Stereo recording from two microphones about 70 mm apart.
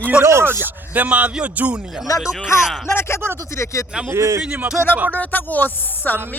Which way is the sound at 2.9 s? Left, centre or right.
Left.